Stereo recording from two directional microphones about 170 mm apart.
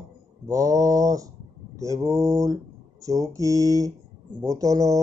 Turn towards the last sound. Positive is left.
turn(degrees=-20)  # may be behind; listen again after turning